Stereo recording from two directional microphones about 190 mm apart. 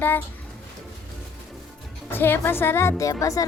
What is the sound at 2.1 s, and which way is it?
A woman's voice, 10° left (ahead or behind).